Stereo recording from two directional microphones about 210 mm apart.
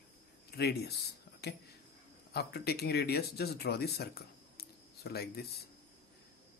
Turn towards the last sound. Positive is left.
turn(degrees=50)  # may be behind; listen again after turning